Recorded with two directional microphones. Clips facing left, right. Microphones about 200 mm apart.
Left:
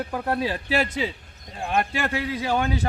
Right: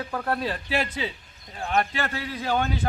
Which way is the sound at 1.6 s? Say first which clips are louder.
Left 1 dB; 10° left (ahead or behind).